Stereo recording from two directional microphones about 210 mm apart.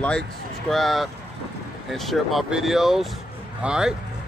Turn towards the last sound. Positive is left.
turn(degrees=-5)  # may be behind; listen again after turning